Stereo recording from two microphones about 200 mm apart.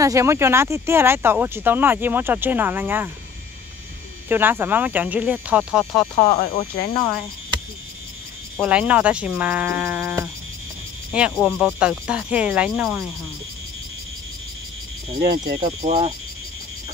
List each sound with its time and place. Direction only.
0.0 s speech: 15° right (ahead or behind)
4.3 s speech: 10° right (ahead or behind)
6.1 s speech: 35° left (ahead or behind)
8.5 s speech: 5° right (ahead or behind)
15.1 s speech: 45° right (ahead or behind)